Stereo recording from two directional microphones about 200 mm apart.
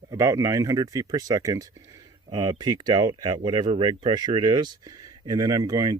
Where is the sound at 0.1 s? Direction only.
15° right (ahead or behind).